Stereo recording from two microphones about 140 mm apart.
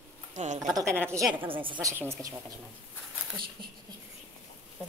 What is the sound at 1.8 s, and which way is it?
Speech, 20° right (ahead or behind).